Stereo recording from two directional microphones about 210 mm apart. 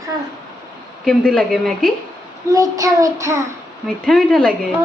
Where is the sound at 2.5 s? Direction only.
15° right (ahead or behind).